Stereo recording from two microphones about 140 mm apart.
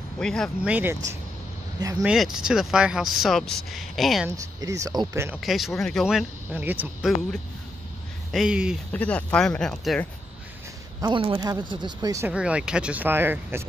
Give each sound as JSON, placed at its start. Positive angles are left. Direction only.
{"t": 0.2, "sound": "speech", "side_deg": 5}
{"t": 0.7, "sound": "speech", "side_deg": -15}
{"t": 1.8, "sound": "speech", "side_deg": -25}
{"t": 2.0, "sound": "speech", "side_deg": -5}
{"t": 4.6, "sound": "speech", "side_deg": -25}
{"t": 5.4, "sound": "speech", "side_deg": 0}
{"t": 6.5, "sound": "speech", "side_deg": -15}
{"t": 8.3, "sound": "speech", "side_deg": -5}
{"t": 8.9, "sound": "speech", "side_deg": 10}
{"t": 11.0, "sound": "speech", "side_deg": -35}
{"t": 12.3, "sound": "speech", "side_deg": -10}